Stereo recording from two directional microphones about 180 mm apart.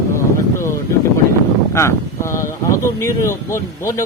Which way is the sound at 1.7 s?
15° left (ahead or behind).